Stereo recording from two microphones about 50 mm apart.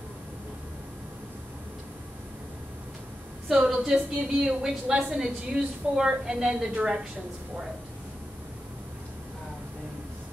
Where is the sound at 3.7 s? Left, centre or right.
Centre.